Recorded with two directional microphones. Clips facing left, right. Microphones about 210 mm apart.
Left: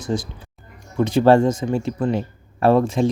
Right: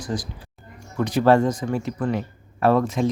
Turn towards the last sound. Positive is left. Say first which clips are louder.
# left 3 dB
turn(degrees=30)  # may be behind; listen again after turning